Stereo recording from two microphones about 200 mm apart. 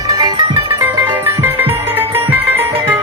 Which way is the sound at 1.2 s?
10° right (ahead or behind).